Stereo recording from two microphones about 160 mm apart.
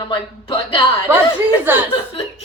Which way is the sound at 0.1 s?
30° left (ahead or behind).